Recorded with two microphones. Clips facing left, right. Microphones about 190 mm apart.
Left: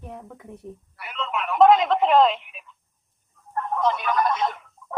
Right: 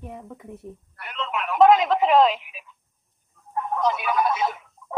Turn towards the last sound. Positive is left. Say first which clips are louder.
# even
turn(degrees=-5)  # may be behind; listen again after turning